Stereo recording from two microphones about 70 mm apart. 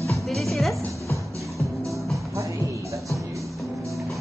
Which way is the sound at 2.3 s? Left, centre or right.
Right.